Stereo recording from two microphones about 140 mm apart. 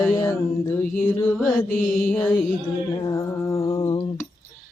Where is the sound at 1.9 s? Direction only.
5° left (ahead or behind).